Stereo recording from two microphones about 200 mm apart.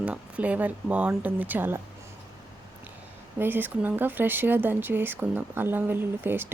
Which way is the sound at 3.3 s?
10° right (ahead or behind).